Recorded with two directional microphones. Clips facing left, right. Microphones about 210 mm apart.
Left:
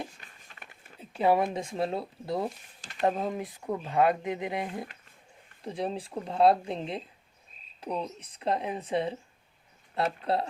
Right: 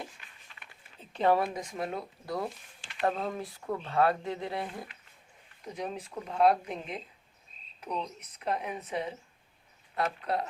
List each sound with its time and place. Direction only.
0.2 s a sound: 45° left (ahead or behind)
1.1 s speech: 10° left (ahead or behind)
1.5 s speech: 30° left (ahead or behind)
2.8 s speech: 40° left (ahead or behind)
3.1 s speech: 15° left (ahead or behind)
5.6 s speech: 30° left (ahead or behind)